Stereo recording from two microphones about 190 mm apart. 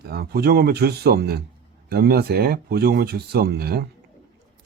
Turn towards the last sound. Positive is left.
turn(degrees=-55)  # may be behind; listen again after turning